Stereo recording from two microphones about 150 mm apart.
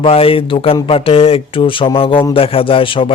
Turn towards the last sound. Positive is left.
turn(degrees=35)  # may be behind; listen again after turning